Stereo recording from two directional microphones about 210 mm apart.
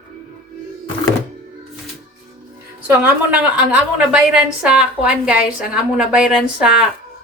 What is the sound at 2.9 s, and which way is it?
A woman's voice, 10° right (ahead or behind).